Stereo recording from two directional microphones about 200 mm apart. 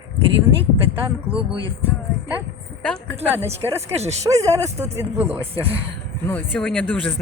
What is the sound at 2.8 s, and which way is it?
Speech, 5° left (ahead or behind).